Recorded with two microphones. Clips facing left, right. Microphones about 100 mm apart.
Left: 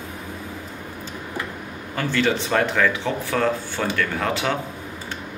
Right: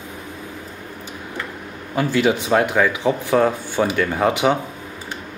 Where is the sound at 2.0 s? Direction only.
15° right (ahead or behind).